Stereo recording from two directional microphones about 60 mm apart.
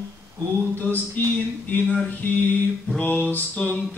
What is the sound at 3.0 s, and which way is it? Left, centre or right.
Music, left.